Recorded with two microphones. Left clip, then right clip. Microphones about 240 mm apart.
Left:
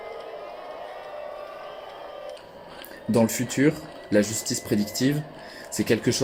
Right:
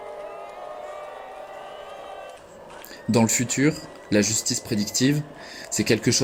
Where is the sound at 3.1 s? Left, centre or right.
Right.